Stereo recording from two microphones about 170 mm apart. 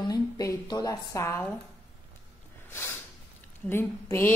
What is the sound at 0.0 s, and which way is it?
A woman's voice, 20° left (ahead or behind).